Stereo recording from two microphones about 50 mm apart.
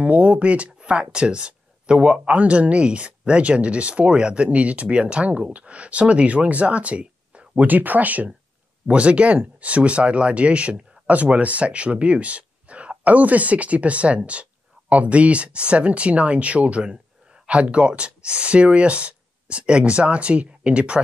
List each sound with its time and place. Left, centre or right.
0.0 s speech: right